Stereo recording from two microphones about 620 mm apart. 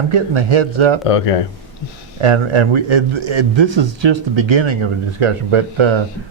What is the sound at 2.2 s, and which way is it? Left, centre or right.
A man's voice, right.